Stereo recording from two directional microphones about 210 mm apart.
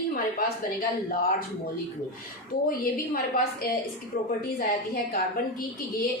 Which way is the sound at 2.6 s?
45° left (ahead or behind).